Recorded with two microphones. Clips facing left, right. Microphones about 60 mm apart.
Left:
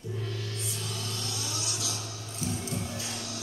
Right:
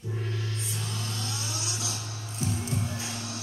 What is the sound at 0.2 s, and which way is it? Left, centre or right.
Music, right.